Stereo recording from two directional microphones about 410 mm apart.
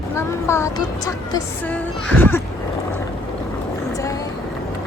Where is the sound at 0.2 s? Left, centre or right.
Centre.